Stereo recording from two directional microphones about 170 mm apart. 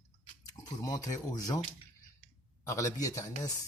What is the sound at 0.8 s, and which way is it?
Speech, 20° left (ahead or behind).